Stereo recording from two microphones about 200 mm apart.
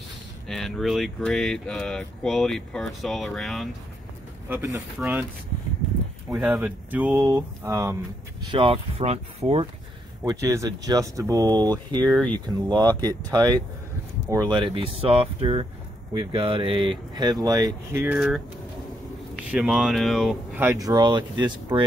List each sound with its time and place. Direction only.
0.5 s speech: centre (ahead or behind)
4.5 s speech: 10° right (ahead or behind)
6.2 s speech: 5° right (ahead or behind); by 9.7 s 30° right (ahead or behind)
10.2 s speech: 15° right (ahead or behind)
12.1 s speech: 5° left (ahead or behind)
12.4 s speech: 20° right (ahead or behind)
19.5 s speech: 5° right (ahead or behind); by 21.8 s 20° right (ahead or behind)